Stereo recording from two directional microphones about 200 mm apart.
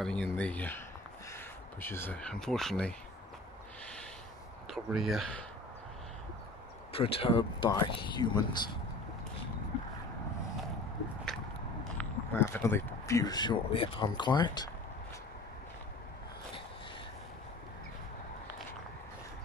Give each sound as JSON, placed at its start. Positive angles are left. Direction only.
{"t": 0.0, "sound": "speech", "side_deg": 5}
{"t": 4.6, "sound": "speech", "side_deg": 0}
{"t": 6.9, "sound": "speech", "side_deg": 30}
{"t": 12.0, "sound": "speech", "side_deg": 10}